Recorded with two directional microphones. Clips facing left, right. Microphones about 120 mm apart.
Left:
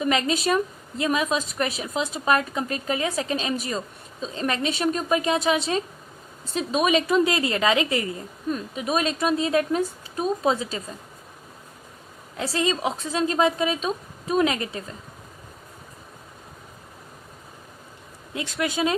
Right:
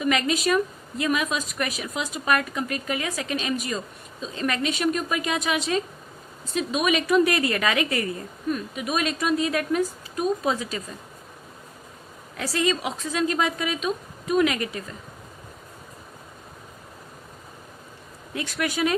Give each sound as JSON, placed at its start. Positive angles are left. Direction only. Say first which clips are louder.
{"t": 0.0, "sound": "a woman's voice", "louder": "even", "side_deg": 30}
{"t": 12.4, "sound": "a woman's voice", "louder": "even", "side_deg": 30}
{"t": 18.3, "sound": "a woman's voice", "louder": "left 1 dB", "side_deg": 25}